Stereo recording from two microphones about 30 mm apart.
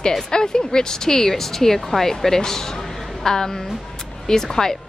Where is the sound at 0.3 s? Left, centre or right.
Left.